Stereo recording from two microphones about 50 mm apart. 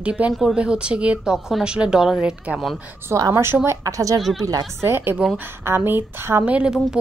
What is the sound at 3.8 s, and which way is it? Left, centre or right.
Speech, right.